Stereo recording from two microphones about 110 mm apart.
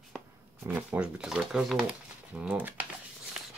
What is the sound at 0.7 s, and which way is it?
Speech, 15° right (ahead or behind).